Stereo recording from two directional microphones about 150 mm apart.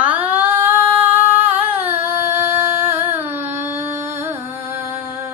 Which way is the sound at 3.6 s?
15° right (ahead or behind).